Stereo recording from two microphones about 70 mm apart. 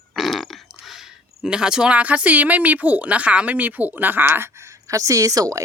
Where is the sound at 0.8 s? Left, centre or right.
Centre; by 5.6 s right.